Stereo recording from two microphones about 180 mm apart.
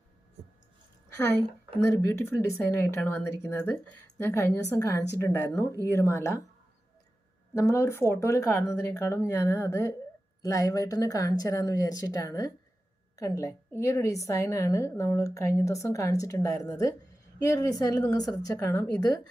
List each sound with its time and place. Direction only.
2.0 s a woman's voice: 15° left (ahead or behind)
7.5 s a woman's voice: 15° left (ahead or behind)